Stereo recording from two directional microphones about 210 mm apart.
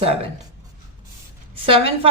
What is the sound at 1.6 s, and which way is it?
Speech, 25° right (ahead or behind).